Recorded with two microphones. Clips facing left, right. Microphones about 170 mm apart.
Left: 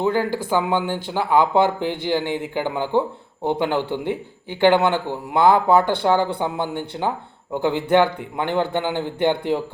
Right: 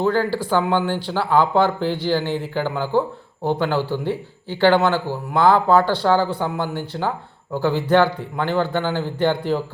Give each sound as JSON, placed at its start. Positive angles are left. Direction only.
{"t": 0.0, "sound": "speech", "side_deg": 15}